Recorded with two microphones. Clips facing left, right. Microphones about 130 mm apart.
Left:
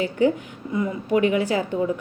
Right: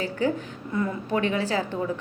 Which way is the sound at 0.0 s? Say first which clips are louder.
Left 5 dB; 20° left (ahead or behind).